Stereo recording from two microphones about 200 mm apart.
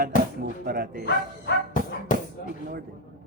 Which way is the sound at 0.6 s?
50° right (ahead or behind).